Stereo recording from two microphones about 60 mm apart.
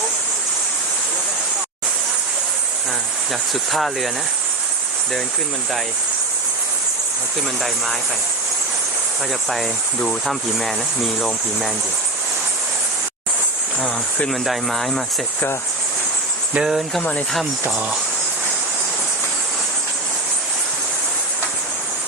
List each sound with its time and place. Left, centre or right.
3.7 s speech: centre
9.5 s speech: centre
14.3 s speech: centre
16.6 s speech: centre
17.0 s speech: left